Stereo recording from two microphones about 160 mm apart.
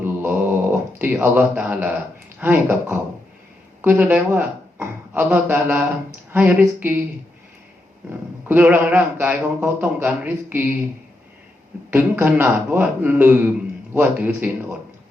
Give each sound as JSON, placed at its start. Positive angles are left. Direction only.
{"t": 0.0, "sound": "a sound", "side_deg": -10}
{"t": 2.4, "sound": "a woman's voice", "side_deg": -15}
{"t": 8.4, "sound": "speech", "side_deg": -10}
{"t": 11.9, "sound": "speech", "side_deg": -15}